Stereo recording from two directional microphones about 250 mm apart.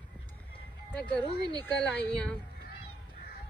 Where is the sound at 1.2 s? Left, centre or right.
Centre.